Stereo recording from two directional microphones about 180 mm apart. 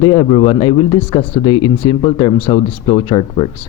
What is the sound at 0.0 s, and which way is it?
A man's voice, 25° left (ahead or behind).